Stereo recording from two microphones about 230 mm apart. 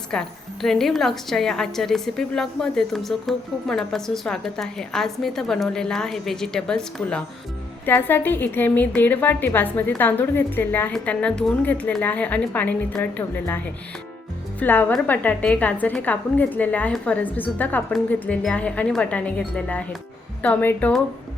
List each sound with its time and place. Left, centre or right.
0.1 s a woman's voice: centre
14.6 s a woman's voice: centre